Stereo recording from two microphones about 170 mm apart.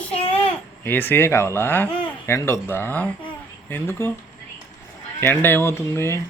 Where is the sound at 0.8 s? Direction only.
10° left (ahead or behind).